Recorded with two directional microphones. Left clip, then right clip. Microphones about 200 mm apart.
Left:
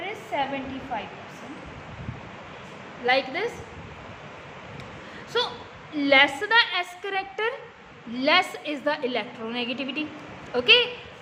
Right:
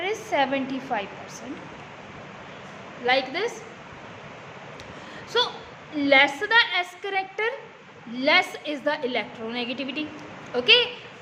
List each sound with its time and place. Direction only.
0.0 s a woman's voice: 50° right (ahead or behind)
3.1 s a woman's voice: 5° right (ahead or behind)
5.3 s a woman's voice: 5° right (ahead or behind)